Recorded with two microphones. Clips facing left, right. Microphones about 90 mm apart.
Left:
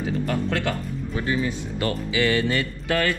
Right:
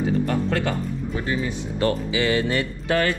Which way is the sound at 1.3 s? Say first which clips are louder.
Left 2 dB; 15° right (ahead or behind).